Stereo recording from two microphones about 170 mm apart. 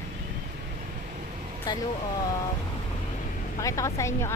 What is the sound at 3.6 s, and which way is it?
Speech, 20° left (ahead or behind).